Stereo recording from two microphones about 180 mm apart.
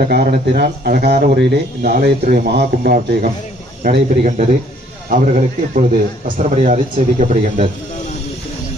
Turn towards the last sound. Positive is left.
turn(degrees=-40)  # may be behind; listen again after turning